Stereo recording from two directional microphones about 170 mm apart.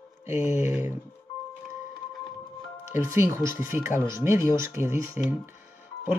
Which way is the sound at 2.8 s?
15° right (ahead or behind).